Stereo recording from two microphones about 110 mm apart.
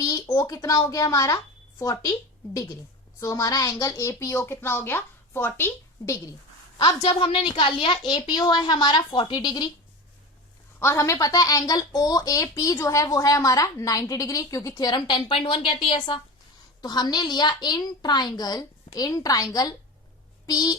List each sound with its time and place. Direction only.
0.0 s a child's voice: 30° left (ahead or behind)
6.7 s a woman's voice: 50° left (ahead or behind)
10.8 s speech: 25° left (ahead or behind); by 16.2 s 50° left (ahead or behind)
16.8 s speech: 40° left (ahead or behind)